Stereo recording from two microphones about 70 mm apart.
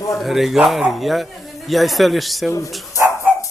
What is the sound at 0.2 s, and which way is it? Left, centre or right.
Speech, centre.